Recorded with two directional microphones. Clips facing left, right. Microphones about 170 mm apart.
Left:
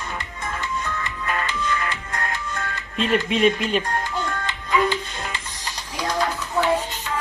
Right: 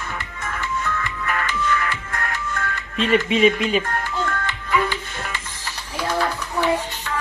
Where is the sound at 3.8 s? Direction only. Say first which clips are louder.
Right 1 dB; 15° left (ahead or behind).